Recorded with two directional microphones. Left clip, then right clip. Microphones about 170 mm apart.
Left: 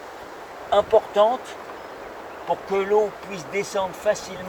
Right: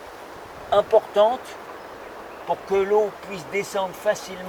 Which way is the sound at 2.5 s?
10° right (ahead or behind).